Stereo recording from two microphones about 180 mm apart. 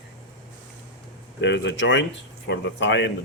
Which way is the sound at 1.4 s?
80° left.